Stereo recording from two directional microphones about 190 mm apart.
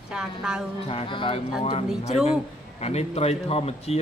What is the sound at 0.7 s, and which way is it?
Speech, 30° left (ahead or behind).